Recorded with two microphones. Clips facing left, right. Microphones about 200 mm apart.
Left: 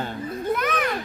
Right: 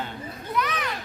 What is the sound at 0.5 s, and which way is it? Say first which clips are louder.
Children playing: left 3 dB; 50° left (ahead or behind).